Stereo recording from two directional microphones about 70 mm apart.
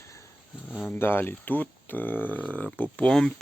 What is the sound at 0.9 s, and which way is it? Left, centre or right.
Speech, left.